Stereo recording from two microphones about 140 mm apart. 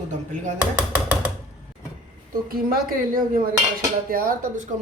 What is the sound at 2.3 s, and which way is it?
A woman's voice, 90° right.